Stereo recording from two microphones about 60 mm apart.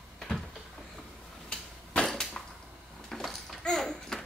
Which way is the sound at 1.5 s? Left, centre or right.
Centre.